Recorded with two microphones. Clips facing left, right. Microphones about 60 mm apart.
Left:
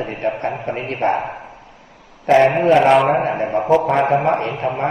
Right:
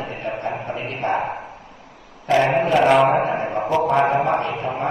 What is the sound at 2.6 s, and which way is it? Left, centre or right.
Speech, left.